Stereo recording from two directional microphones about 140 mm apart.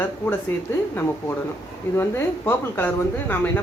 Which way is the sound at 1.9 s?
15° left (ahead or behind).